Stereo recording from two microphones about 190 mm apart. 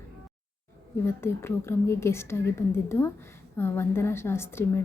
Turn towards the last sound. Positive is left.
turn(degrees=15)  # may be behind; listen again after turning